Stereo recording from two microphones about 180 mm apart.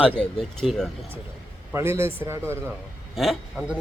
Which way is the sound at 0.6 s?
Centre (ahead or behind).